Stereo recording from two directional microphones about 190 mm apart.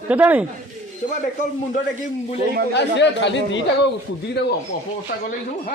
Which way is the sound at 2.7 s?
65° left (ahead or behind).